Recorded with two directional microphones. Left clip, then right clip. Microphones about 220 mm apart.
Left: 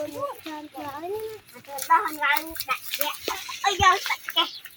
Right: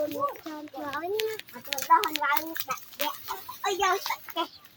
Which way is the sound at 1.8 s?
45° right (ahead or behind).